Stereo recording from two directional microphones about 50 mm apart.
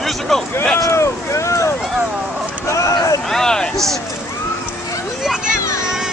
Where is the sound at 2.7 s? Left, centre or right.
Left.